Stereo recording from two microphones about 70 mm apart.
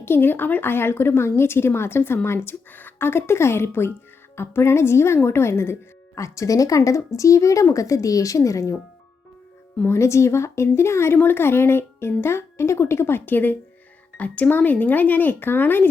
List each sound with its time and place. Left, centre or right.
0.0 s speech: left
9.8 s speech: left